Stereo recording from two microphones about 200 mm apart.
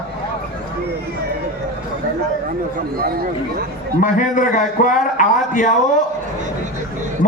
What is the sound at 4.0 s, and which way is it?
A man's voice, 40° left (ahead or behind).